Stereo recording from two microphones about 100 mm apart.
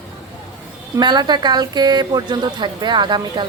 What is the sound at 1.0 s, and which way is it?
Speech, 45° right (ahead or behind).